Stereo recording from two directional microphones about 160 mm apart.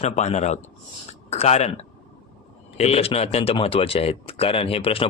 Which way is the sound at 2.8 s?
40° left (ahead or behind).